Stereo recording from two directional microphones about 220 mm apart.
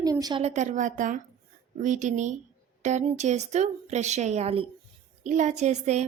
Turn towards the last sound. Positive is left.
turn(degrees=-30)  # may be behind; listen again after turning